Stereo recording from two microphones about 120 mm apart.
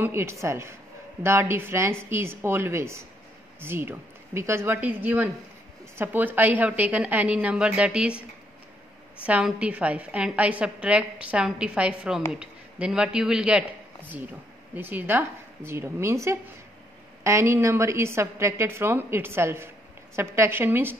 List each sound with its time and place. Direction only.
0.0 s a woman's voice: 20° right (ahead or behind)
9.2 s a woman's voice: 5° right (ahead or behind)